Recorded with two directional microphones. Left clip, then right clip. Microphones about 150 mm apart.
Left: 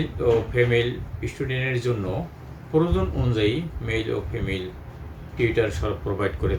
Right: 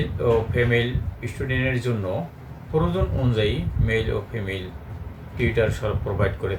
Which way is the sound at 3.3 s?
Centre (ahead or behind).